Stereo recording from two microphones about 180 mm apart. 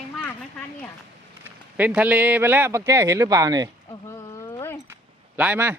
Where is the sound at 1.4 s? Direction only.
10° right (ahead or behind).